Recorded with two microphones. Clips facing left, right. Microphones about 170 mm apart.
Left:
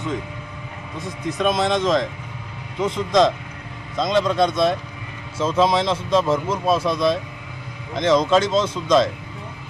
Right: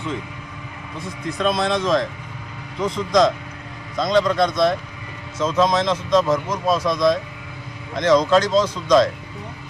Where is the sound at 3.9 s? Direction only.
Centre (ahead or behind).